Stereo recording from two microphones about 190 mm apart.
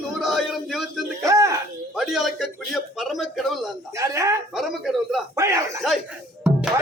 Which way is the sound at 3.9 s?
15° right (ahead or behind).